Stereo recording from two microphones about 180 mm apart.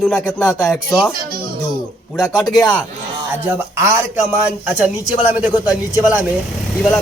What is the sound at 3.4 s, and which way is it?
Speech, 15° right (ahead or behind).